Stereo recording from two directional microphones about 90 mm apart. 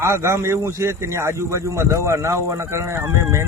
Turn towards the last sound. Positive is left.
turn(degrees=-35)  # may be behind; listen again after turning